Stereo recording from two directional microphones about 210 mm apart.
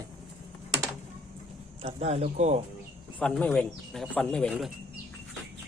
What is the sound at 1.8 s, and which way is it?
Speech, 30° right (ahead or behind).